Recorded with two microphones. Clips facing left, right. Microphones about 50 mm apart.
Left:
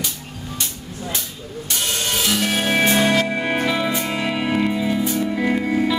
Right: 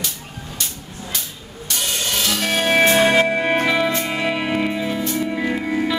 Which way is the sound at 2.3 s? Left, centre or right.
Centre.